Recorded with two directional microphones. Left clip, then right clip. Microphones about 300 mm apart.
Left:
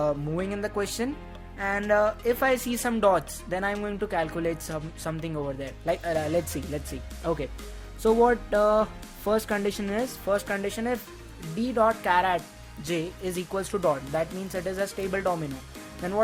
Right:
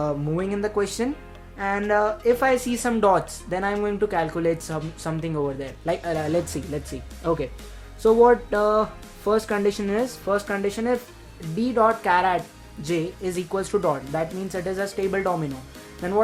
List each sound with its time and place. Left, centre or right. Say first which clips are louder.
0.0 s speech: right 2 dB; left